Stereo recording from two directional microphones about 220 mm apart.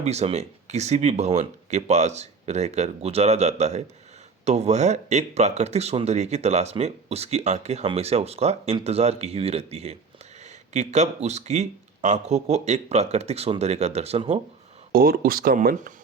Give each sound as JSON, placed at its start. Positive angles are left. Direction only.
{"t": 0.0, "sound": "speech", "side_deg": -30}
{"t": 14.9, "sound": "speech", "side_deg": -40}